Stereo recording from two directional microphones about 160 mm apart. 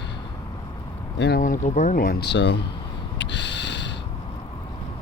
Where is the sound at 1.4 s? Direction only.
50° left (ahead or behind); by 2.6 s 90° left.